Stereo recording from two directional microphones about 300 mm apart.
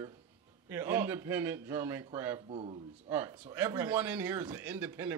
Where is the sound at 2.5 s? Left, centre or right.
Centre.